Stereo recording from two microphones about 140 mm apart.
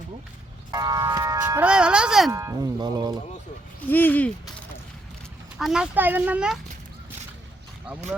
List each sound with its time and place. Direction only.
0.7 s speech: 25° right (ahead or behind)
1.6 s speech: 5° right (ahead or behind)
2.3 s speech: 20° right (ahead or behind)
3.8 s speech: 15° left (ahead or behind)
5.5 s speech: 5° right (ahead or behind)